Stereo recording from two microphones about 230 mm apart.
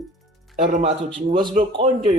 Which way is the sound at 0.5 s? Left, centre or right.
Right.